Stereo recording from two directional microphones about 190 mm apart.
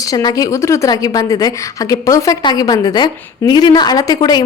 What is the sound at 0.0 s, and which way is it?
A woman's voice, 20° left (ahead or behind).